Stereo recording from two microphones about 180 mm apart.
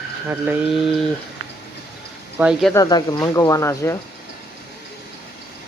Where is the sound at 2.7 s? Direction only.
20° left (ahead or behind).